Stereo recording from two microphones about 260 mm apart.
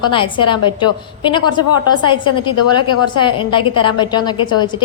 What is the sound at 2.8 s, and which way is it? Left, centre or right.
Speech, left.